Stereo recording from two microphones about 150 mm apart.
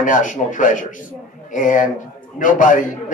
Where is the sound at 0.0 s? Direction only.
60° left (ahead or behind).